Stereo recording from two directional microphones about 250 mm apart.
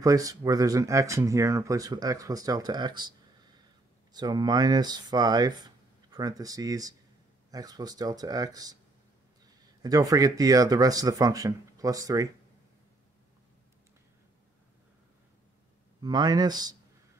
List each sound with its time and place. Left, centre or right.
0.0 s speech: centre
9.8 s speech: centre
16.0 s speech: centre